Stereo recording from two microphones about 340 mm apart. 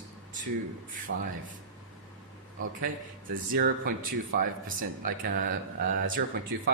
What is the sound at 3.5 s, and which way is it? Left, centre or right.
Speech, right.